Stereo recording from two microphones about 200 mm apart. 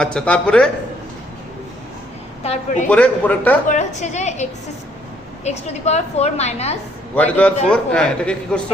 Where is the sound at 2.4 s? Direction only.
35° left (ahead or behind).